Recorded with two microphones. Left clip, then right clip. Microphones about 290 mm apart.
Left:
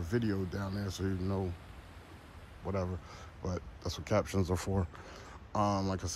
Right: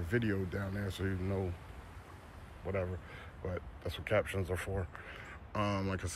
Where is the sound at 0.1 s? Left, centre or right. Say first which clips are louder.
Even; centre.